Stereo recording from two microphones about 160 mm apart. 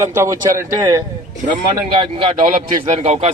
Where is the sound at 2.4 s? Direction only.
50° right (ahead or behind).